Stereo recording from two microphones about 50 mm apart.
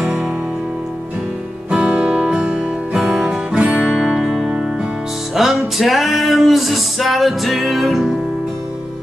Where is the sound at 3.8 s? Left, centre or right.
Centre.